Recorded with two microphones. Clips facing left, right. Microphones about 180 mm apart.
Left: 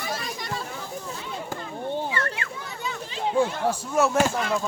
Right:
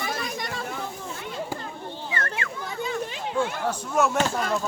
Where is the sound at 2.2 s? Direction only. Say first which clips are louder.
Even; 50° right (ahead or behind).